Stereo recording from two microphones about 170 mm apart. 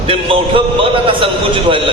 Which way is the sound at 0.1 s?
30° right (ahead or behind).